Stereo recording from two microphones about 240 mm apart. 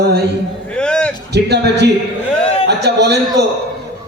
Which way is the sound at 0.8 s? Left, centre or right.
Centre.